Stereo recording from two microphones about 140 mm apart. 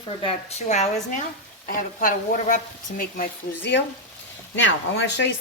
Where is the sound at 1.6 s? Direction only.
85° left.